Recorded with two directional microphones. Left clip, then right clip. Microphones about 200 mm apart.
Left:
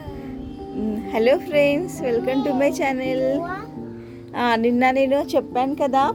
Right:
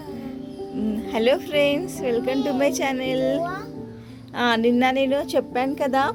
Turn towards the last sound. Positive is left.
turn(degrees=5)  # may be behind; listen again after turning